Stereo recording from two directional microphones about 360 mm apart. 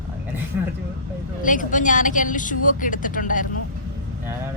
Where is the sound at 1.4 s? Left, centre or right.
Left.